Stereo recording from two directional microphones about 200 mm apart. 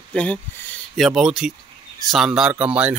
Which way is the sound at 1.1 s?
5° right (ahead or behind).